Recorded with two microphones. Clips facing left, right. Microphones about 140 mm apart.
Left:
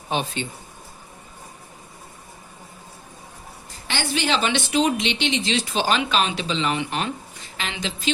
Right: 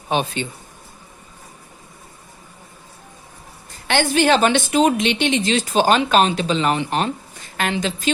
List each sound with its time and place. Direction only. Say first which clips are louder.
0.1 s a man's voice: right 4 dB; 60° right (ahead or behind)
3.8 s a woman's voice: right 8 dB; 50° right (ahead or behind)
7.5 s a woman's voice: right 8 dB; 50° right (ahead or behind)